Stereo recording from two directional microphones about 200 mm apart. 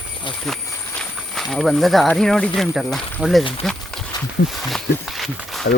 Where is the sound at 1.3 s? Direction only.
Centre (ahead or behind).